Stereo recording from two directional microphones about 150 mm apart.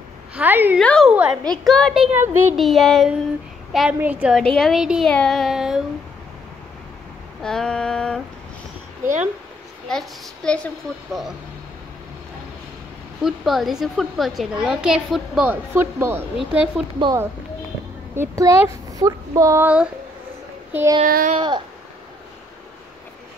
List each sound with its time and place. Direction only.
0.4 s a woman's voice: 15° right (ahead or behind)
0.7 s a woman's voice: 5° left (ahead or behind)
1.1 s a child's voice: 10° right (ahead or behind)
1.4 s a woman's voice: 5° left (ahead or behind)
2.1 s a woman's voice: 15° right (ahead or behind)
2.5 s a woman's voice: centre (ahead or behind)
4.4 s a woman's voice: centre (ahead or behind)
7.4 s a woman's voice: 5° left (ahead or behind)
9.8 s a woman's voice: 5° left (ahead or behind)
13.2 s a woman's voice: centre (ahead or behind)
16.3 s a woman's voice: centre (ahead or behind)
18.1 s speech: 20° right (ahead or behind)
21.0 s speech: 70° right (ahead or behind)
21.4 s a sound: 30° right (ahead or behind)